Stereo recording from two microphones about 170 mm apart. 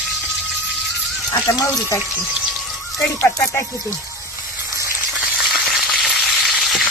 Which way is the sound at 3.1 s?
15° left (ahead or behind).